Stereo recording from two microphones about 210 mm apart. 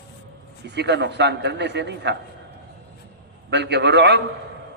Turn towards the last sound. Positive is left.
turn(degrees=-55)  # may be behind; listen again after turning